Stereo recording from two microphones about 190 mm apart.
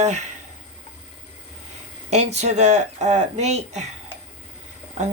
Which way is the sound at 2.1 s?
35° right (ahead or behind).